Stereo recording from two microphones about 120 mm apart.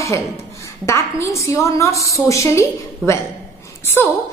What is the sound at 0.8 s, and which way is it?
A woman's voice, 25° left (ahead or behind).